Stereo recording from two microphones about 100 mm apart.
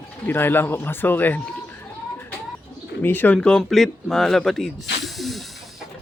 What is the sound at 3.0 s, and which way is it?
Speech, 20° left (ahead or behind).